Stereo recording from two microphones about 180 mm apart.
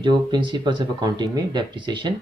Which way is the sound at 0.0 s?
25° right (ahead or behind).